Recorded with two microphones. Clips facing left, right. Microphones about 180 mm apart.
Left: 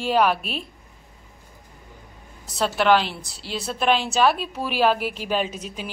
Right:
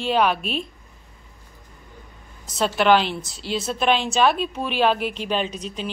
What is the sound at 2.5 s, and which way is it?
A woman's voice, 20° right (ahead or behind).